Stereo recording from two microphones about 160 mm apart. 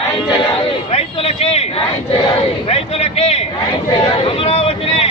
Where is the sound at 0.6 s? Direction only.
35° left (ahead or behind).